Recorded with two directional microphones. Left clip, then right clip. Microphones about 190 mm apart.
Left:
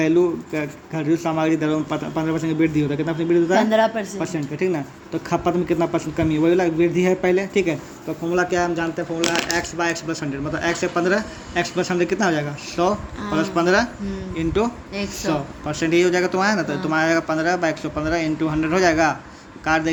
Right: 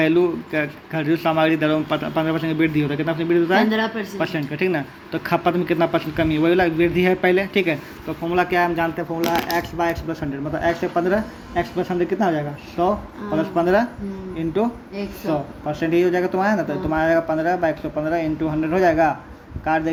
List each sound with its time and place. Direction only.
0.0 s speech: 5° left (ahead or behind)
3.7 s speech: 50° left (ahead or behind)
4.2 s speech: centre (ahead or behind)